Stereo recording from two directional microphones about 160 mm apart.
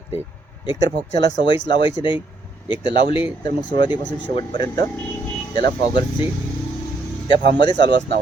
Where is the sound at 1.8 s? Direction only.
30° left (ahead or behind).